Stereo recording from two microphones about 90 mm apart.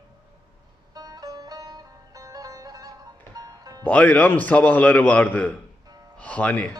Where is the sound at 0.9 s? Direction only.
45° right (ahead or behind).